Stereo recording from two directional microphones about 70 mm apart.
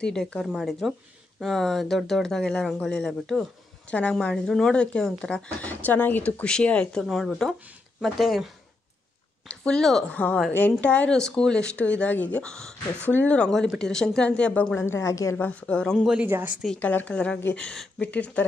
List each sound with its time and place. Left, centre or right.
0.0 s speech: centre
0.5 s speech: centre
5.7 s speech: left
6.4 s speech: centre
9.5 s speech: centre
10.5 s speech: left
11.1 s speech: centre
12.4 s speech: centre
13.0 s speech: left
14.8 s a woman's voice: left
15.3 s speech: left
16.0 s speech: centre
16.8 s speech: left